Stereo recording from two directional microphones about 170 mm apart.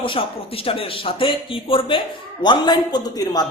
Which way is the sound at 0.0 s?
30° left (ahead or behind).